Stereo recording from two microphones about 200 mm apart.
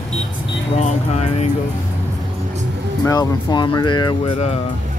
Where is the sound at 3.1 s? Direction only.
20° left (ahead or behind).